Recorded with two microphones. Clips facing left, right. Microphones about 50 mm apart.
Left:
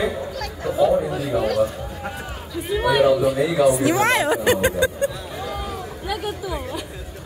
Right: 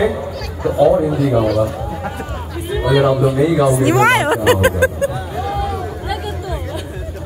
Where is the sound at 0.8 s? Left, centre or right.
Right.